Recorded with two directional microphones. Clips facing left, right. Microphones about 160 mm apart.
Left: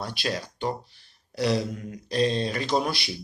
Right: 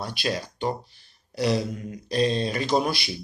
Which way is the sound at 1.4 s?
5° right (ahead or behind).